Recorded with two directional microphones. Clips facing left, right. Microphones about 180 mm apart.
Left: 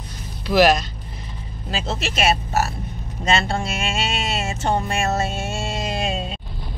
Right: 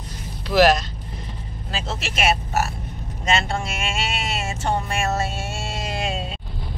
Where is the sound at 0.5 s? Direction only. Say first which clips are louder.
Left 1 dB; centre (ahead or behind).